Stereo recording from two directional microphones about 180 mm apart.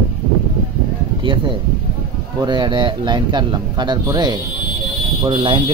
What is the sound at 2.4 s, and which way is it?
Speech, 25° right (ahead or behind).